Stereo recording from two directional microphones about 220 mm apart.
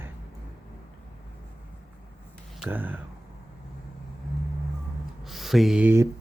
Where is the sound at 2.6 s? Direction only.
10° right (ahead or behind).